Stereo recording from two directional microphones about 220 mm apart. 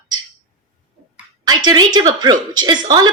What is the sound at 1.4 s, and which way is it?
Speech, 20° right (ahead or behind).